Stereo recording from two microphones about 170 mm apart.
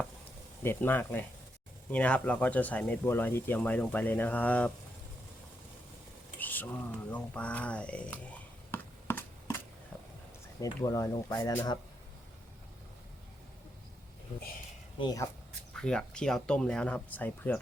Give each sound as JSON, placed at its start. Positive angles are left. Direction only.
{"t": 0.6, "sound": "speech", "side_deg": 10}
{"t": 6.4, "sound": "rain", "side_deg": 10}
{"t": 7.1, "sound": "a sound", "side_deg": 10}
{"t": 10.8, "sound": "speech", "side_deg": 20}
{"t": 14.9, "sound": "speech", "side_deg": 25}
{"t": 15.7, "sound": "speech", "side_deg": 5}